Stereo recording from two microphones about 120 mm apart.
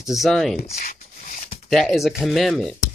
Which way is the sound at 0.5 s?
65° left (ahead or behind).